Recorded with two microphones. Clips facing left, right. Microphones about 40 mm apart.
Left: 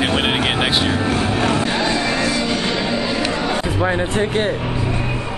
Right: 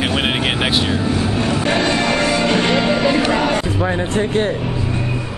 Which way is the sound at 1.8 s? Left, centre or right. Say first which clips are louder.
Right 2 dB; right.